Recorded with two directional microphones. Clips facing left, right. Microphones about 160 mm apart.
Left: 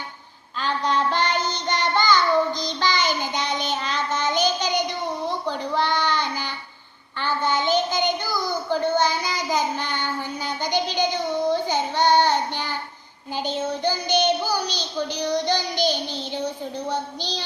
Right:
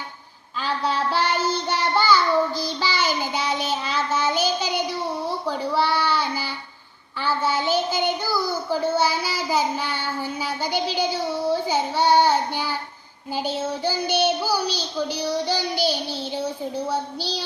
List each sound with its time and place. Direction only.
0.6 s child singing: 5° right (ahead or behind)